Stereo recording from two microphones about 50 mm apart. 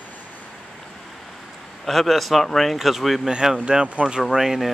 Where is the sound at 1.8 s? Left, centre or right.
Centre.